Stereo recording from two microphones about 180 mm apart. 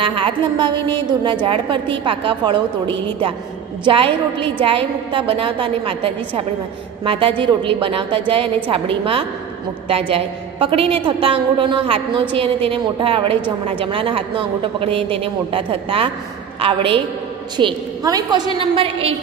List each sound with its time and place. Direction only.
0.0 s a woman's voice: 30° right (ahead or behind)